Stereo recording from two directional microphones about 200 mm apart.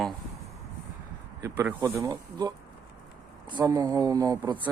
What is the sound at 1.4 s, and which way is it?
Speech, 15° right (ahead or behind).